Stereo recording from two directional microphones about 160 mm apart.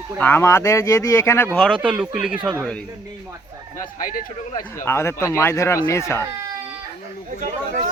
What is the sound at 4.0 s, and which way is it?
Speech, 60° left (ahead or behind).